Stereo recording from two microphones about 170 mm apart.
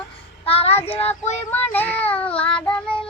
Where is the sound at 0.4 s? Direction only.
35° left (ahead or behind).